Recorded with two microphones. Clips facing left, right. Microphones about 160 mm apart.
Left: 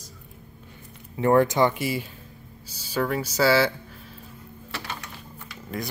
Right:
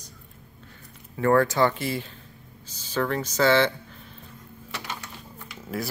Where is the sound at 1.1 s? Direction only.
20° left (ahead or behind).